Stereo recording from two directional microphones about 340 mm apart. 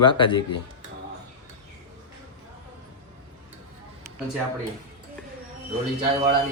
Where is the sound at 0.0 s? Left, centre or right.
Centre.